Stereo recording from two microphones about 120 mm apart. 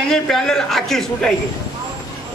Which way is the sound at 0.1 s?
5° left (ahead or behind).